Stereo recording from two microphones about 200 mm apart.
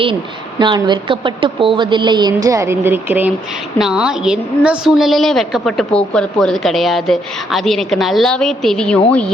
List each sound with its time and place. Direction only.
0.6 s a woman's voice: 25° right (ahead or behind); by 9.3 s 5° left (ahead or behind)